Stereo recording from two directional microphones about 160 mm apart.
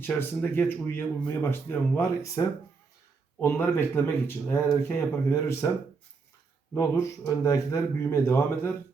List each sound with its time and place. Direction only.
0.0 s speech: 10° left (ahead or behind)
6.7 s speech: 20° left (ahead or behind)